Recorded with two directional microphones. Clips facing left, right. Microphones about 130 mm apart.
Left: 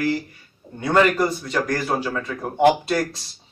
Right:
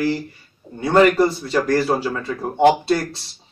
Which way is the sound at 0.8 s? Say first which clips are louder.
Right 4 dB; 30° right (ahead or behind).